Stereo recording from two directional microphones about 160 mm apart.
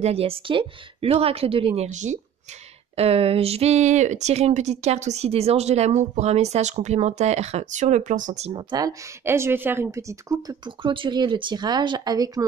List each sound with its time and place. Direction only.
0.0 s a woman's voice: 40° right (ahead or behind)
1.8 s speech: 50° right (ahead or behind)
8.5 s speech: 25° right (ahead or behind)